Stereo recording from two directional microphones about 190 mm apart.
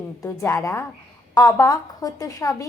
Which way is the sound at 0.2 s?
15° left (ahead or behind).